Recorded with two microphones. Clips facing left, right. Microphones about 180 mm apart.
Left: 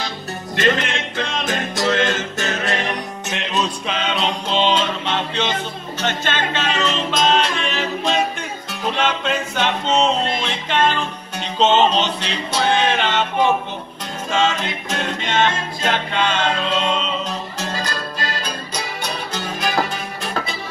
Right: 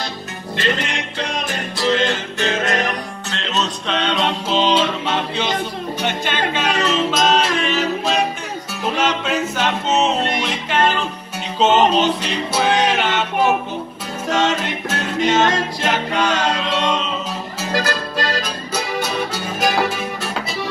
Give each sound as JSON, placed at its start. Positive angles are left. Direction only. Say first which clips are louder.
{"t": 0.6, "sound": "music", "louder": "left 3 dB", "side_deg": 50}
{"t": 3.3, "sound": "music", "louder": "left 1 dB", "side_deg": 15}
{"t": 17.7, "sound": "music", "louder": "right 5 dB", "side_deg": -80}
{"t": 18.9, "sound": "music", "louder": "right 4 dB", "side_deg": -10}